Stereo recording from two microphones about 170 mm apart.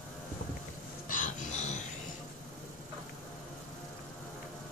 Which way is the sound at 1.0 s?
50° left (ahead or behind).